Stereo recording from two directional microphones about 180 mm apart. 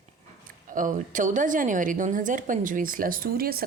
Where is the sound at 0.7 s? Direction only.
45° right (ahead or behind).